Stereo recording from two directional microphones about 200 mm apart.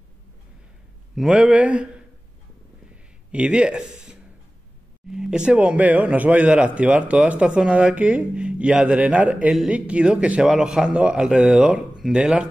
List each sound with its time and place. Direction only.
1.1 s speech: 5° right (ahead or behind)
3.3 s speech: 5° right (ahead or behind)